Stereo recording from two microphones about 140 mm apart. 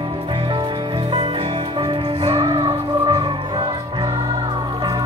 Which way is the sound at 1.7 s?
35° right (ahead or behind).